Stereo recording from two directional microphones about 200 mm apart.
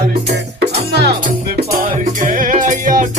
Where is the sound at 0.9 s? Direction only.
55° right (ahead or behind).